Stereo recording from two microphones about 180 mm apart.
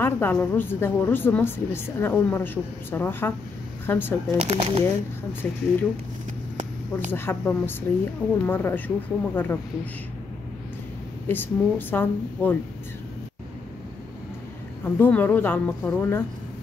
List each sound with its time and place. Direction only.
0.0 s a woman's voice: 10° left (ahead or behind)
4.4 s speech: 35° right (ahead or behind)
5.4 s a woman's voice: 10° left (ahead or behind)
7.1 s a woman's voice: 10° left (ahead or behind)
11.2 s a woman's voice: 10° left (ahead or behind)
15.0 s a woman's voice: 10° left (ahead or behind)